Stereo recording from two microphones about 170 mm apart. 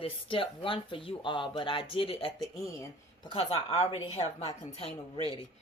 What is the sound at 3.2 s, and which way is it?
Speech, 35° left (ahead or behind).